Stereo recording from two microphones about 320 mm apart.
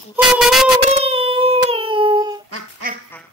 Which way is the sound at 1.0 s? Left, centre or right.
Centre.